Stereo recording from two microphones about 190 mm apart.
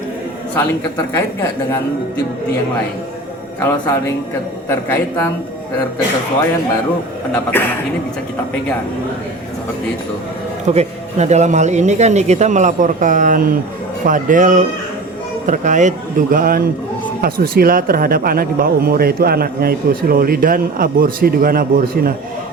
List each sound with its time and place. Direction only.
0.9 s speech: 15° left (ahead or behind)
3.6 s speech: 15° left (ahead or behind)
7.5 s speech: 10° left (ahead or behind)
10.7 s speech: 35° right (ahead or behind); by 22.1 s 50° right (ahead or behind)